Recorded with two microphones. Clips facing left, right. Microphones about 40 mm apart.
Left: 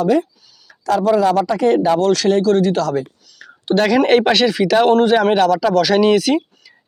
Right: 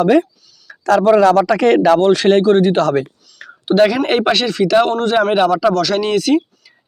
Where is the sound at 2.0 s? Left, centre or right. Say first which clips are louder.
Right 3 dB; right.